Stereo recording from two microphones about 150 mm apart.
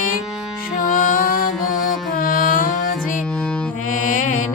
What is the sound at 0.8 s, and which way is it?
Music, 60° left (ahead or behind).